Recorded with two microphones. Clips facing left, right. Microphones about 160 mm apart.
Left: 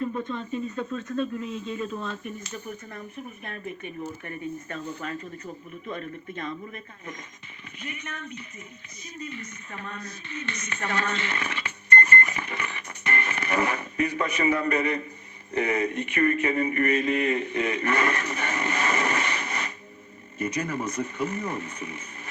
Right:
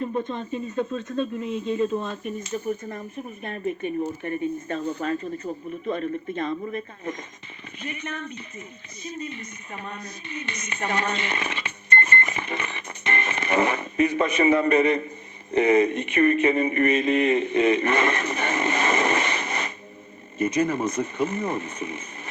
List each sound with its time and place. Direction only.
0.0 s speech: 25° right (ahead or behind)
3.8 s a woman's voice: 25° right (ahead or behind)